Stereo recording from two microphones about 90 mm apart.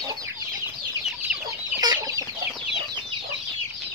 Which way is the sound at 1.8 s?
45° right (ahead or behind).